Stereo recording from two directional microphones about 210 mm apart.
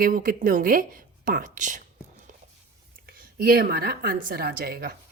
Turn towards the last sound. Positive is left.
turn(degrees=-45)  # may be behind; listen again after turning